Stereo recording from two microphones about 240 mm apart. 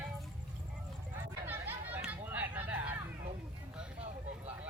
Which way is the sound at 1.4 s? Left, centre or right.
Centre.